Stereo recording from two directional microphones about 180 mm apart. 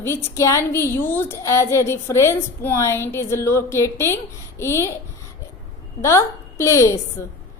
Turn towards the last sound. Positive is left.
turn(degrees=15)  # may be behind; listen again after turning